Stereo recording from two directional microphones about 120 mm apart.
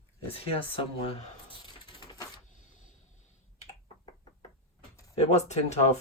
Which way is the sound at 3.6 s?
60° left (ahead or behind).